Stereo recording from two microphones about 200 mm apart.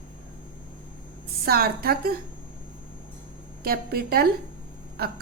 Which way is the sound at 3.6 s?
50° right (ahead or behind).